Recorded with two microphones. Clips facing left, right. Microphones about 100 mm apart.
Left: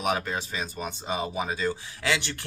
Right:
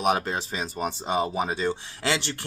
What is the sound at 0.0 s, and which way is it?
Speech, 25° right (ahead or behind).